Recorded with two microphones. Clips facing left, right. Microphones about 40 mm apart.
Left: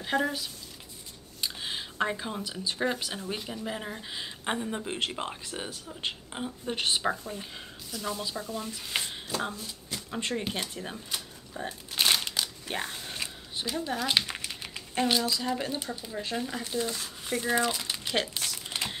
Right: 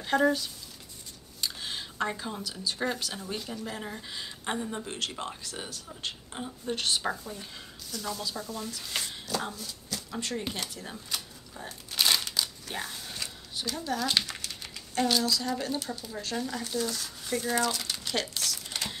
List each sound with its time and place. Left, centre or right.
0.0 s a woman's voice: centre
4.9 s speech: left
10.5 s crumpling: left
12.6 s speech: left